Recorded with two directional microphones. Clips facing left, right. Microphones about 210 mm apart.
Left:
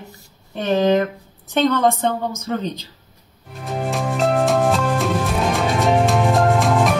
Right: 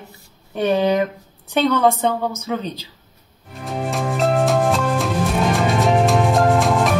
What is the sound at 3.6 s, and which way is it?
Music, centre (ahead or behind).